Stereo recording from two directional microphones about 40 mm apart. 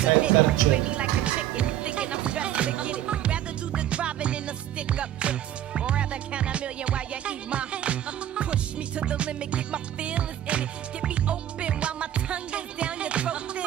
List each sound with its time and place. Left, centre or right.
0.0 s music: right
9.0 s music: right